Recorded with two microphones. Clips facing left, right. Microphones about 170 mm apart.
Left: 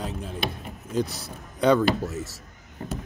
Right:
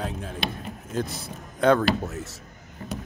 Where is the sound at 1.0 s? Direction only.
50° right (ahead or behind).